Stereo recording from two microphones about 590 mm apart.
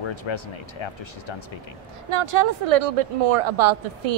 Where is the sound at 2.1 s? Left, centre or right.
Right.